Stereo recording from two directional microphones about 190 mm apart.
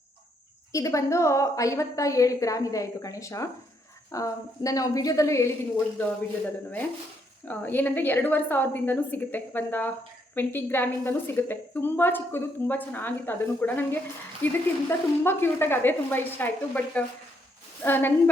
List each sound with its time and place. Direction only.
0.7 s a woman's voice: 15° left (ahead or behind)
7.4 s a woman's voice: 10° left (ahead or behind)